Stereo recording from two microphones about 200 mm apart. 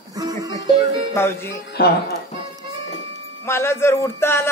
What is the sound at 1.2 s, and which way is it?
Speech, 10° left (ahead or behind).